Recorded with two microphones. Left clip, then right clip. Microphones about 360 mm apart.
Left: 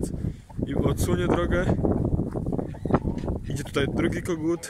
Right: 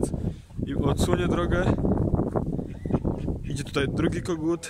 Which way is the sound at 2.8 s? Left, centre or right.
Left.